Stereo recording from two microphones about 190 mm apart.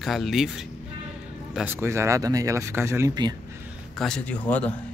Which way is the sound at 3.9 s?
5° left (ahead or behind).